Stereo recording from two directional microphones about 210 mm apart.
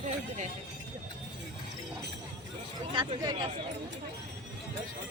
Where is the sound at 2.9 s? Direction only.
20° right (ahead or behind).